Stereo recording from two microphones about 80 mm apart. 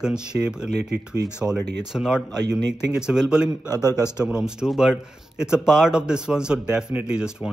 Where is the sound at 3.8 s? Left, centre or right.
Left.